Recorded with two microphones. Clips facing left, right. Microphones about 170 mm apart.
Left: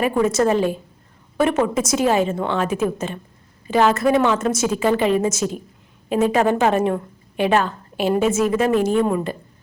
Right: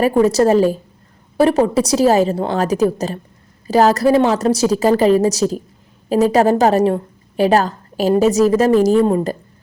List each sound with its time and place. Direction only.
0.0 s a woman's voice: 35° right (ahead or behind)